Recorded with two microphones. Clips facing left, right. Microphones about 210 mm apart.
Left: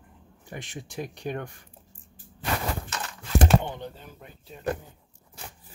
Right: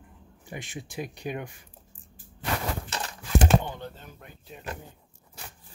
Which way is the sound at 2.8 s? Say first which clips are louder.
Right 1 dB; 30° right (ahead or behind).